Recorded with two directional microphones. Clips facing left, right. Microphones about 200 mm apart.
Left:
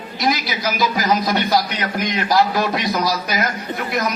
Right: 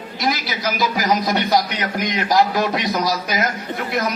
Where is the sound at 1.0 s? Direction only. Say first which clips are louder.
Even; 15° right (ahead or behind).